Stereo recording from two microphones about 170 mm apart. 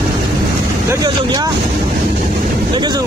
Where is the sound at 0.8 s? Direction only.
25° right (ahead or behind).